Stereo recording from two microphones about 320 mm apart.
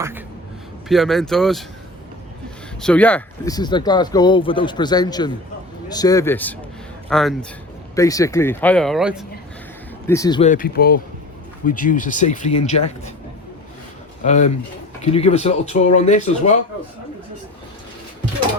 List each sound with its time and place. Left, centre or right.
0.9 s speech: centre
2.8 s speech: centre
10.1 s speech: centre
14.3 s speech: left